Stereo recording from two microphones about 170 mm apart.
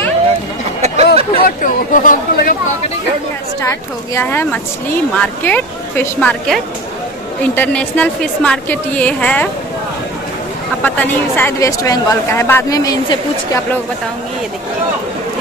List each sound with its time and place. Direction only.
0.8 s a sound: 40° right (ahead or behind)
1.4 s speech: 55° left (ahead or behind)
3.6 s speech: 15° left (ahead or behind)
10.8 s speech: 10° left (ahead or behind)